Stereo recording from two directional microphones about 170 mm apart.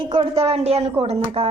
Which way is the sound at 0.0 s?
30° right (ahead or behind).